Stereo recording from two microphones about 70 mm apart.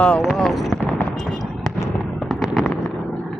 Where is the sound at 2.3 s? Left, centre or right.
Centre.